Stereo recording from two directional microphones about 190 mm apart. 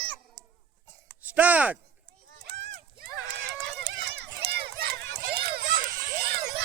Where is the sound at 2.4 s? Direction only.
65° right (ahead or behind).